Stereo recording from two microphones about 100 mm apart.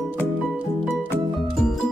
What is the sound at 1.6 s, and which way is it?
Music, 5° left (ahead or behind).